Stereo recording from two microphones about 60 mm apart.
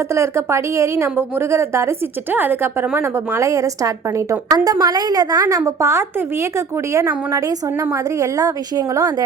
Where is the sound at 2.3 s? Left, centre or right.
Right.